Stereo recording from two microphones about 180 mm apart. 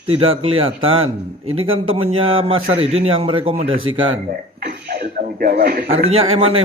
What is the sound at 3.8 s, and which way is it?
Speech, 90° right.